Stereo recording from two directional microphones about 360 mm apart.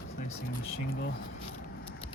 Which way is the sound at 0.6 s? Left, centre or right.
Left.